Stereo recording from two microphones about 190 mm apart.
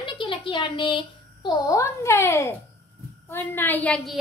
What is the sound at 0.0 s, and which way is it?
A woman's voice, 25° left (ahead or behind).